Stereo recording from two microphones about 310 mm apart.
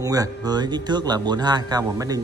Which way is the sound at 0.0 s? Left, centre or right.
Centre.